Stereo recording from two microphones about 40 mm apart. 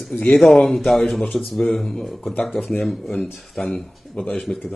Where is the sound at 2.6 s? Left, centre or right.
Centre.